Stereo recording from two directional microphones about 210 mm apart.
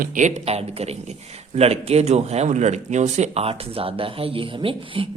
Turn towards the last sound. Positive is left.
turn(degrees=-25)  # may be behind; listen again after turning